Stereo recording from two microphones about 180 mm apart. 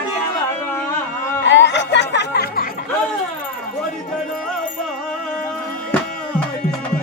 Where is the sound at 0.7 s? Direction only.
10° left (ahead or behind).